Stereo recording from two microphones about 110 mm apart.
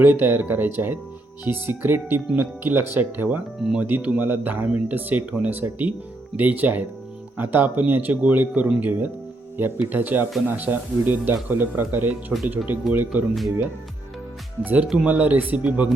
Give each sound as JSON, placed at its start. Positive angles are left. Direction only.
{"t": 0.0, "sound": "speech", "side_deg": -15}
{"t": 3.6, "sound": "speech", "side_deg": -5}
{"t": 3.8, "sound": "speech", "side_deg": -15}
{"t": 14.6, "sound": "speech", "side_deg": -15}